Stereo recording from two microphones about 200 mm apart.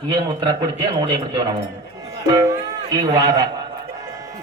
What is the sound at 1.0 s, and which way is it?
Speech, 20° right (ahead or behind).